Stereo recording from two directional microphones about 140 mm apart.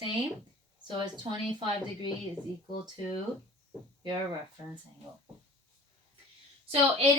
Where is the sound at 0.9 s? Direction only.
35° right (ahead or behind).